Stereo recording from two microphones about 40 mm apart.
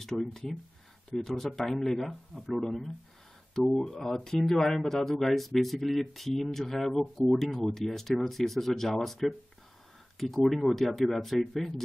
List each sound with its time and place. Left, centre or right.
0.0 s speech: centre